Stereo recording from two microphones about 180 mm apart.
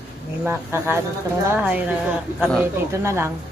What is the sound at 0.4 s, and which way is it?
A woman's voice, 10° right (ahead or behind).